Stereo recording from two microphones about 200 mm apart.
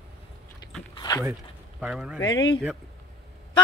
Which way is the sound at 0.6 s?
20° left (ahead or behind).